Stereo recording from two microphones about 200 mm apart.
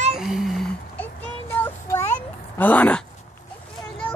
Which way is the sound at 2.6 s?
10° left (ahead or behind).